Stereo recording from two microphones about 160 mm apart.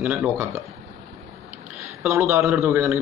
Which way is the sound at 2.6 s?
15° right (ahead or behind).